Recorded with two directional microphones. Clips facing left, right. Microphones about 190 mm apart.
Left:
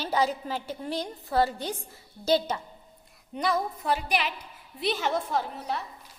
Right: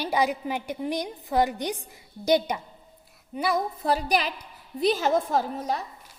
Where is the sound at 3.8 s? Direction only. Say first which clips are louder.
Right 3 dB; 35° right (ahead or behind).